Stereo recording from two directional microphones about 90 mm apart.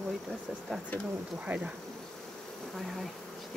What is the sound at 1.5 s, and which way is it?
Insect, 20° right (ahead or behind).